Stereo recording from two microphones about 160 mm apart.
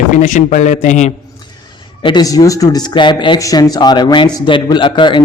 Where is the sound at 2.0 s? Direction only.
25° left (ahead or behind).